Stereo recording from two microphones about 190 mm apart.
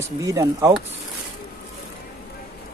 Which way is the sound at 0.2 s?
15° right (ahead or behind).